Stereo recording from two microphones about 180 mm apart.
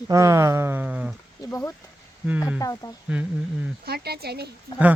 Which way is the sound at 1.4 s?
15° left (ahead or behind).